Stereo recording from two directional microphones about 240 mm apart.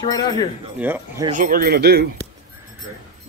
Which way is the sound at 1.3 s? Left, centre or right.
Right.